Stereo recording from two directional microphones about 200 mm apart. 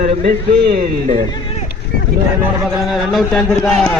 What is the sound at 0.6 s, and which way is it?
Speech, 40° right (ahead or behind).